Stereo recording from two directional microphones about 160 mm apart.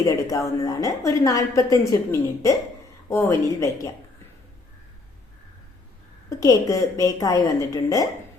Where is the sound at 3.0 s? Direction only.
20° left (ahead or behind).